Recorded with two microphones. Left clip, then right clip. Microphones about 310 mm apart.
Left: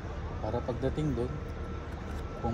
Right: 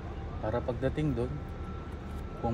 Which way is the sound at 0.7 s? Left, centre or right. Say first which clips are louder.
Right 1 dB; right.